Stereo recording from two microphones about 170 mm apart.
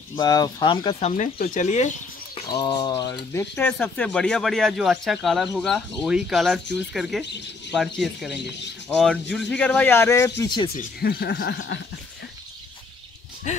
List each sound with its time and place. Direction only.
0.1 s speech: 25° left (ahead or behind)
0.9 s speech: 45° left (ahead or behind)
2.4 s speech: 25° left (ahead or behind)
10.4 s speech: 25° left (ahead or behind)
10.8 s speech: 65° left (ahead or behind)
13.5 s speech: 45° left (ahead or behind)